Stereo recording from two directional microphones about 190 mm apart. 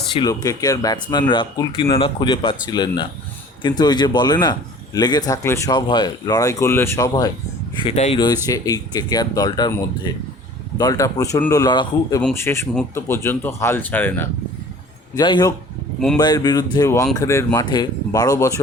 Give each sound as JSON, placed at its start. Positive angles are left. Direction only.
{"t": 0.1, "sound": "speech", "side_deg": 25}
{"t": 7.8, "sound": "speech", "side_deg": 30}
{"t": 8.4, "sound": "speech", "side_deg": 20}
{"t": 10.8, "sound": "speech", "side_deg": 20}
{"t": 15.1, "sound": "speech", "side_deg": 20}